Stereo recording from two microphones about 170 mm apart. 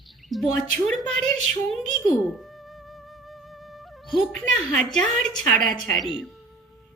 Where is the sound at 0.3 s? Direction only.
Centre (ahead or behind).